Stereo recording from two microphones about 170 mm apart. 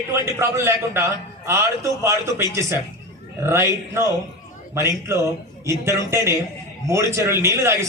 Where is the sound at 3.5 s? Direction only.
15° right (ahead or behind).